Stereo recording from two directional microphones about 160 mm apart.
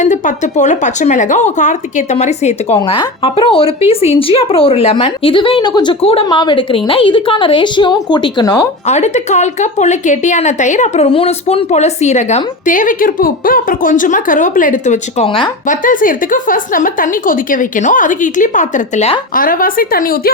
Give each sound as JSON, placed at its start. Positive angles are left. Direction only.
{"t": 0.0, "sound": "speech", "side_deg": 50}
{"t": 8.9, "sound": "a woman's voice", "side_deg": 45}
{"t": 19.4, "sound": "a woman's voice", "side_deg": 60}